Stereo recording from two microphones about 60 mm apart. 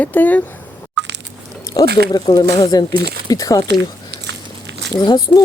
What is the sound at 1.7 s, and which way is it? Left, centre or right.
Speech, left.